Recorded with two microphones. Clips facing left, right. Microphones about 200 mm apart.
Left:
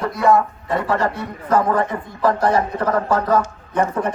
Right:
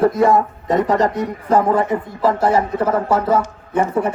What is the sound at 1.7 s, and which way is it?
A man's voice, 5° right (ahead or behind).